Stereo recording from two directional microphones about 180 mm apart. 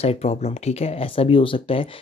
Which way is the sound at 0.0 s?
35° left (ahead or behind).